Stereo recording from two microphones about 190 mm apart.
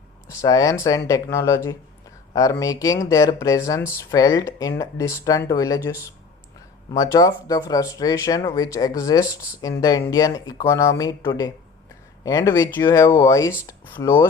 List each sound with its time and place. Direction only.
0.3 s speech: 20° left (ahead or behind)